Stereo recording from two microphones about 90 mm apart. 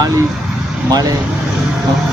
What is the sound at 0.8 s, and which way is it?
Speech, 45° right (ahead or behind).